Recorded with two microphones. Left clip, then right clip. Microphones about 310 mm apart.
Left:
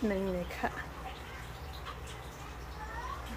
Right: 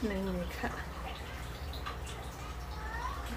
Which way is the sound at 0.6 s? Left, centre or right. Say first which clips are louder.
Left 3 dB; centre.